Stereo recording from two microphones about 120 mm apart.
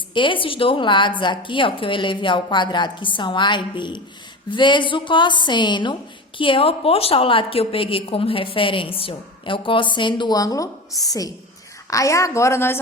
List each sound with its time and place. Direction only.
0.1 s a woman's voice: 45° left (ahead or behind); by 12.8 s 20° left (ahead or behind)